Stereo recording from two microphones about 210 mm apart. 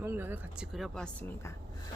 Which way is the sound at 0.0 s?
10° right (ahead or behind).